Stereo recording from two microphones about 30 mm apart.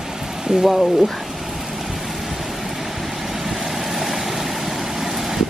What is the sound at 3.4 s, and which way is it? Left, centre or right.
Vehicle, centre.